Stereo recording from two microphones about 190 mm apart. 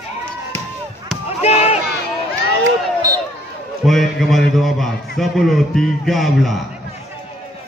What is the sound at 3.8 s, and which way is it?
A man's voice, centre (ahead or behind).